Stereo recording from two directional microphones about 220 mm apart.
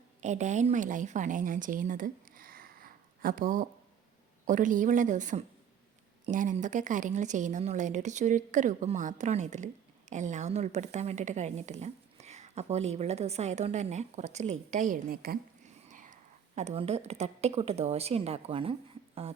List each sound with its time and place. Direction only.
0.2 s a woman's voice: 35° right (ahead or behind)